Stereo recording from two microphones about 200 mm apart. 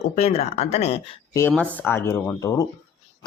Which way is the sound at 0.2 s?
30° left (ahead or behind).